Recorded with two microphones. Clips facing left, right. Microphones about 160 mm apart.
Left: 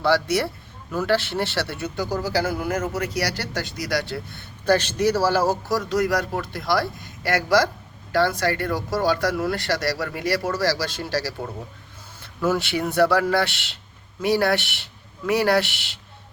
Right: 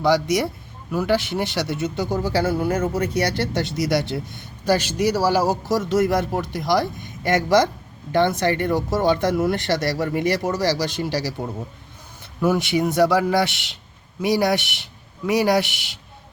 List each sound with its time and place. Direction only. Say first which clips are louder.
0.0 s a man's voice: right 2 dB; 15° right (ahead or behind)